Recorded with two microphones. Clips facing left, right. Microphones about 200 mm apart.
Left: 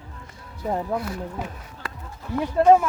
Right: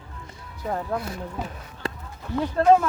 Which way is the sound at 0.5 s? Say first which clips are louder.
Left 2 dB; 20° left (ahead or behind).